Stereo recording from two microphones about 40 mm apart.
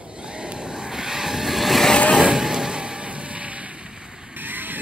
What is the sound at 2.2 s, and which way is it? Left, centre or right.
Vehicle, centre.